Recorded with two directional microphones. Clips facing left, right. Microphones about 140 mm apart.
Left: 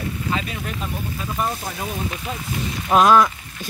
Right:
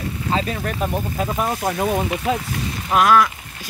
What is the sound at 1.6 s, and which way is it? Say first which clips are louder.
Speech: right 8 dB; 60° right (ahead or behind).